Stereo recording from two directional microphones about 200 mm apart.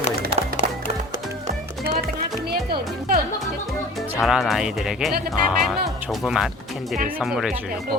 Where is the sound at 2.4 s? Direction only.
50° right (ahead or behind).